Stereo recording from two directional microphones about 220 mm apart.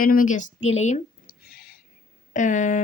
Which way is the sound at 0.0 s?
40° left (ahead or behind).